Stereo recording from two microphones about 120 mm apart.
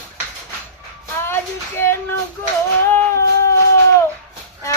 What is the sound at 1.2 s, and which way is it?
Speech, 20° left (ahead or behind).